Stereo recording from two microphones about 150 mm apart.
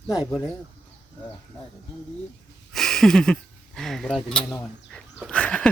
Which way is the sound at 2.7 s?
Centre (ahead or behind).